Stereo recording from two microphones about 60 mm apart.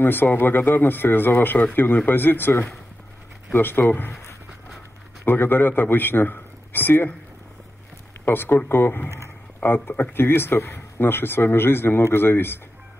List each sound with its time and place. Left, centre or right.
0.0 s speech: left
5.2 s a man's voice: left
8.3 s speech: left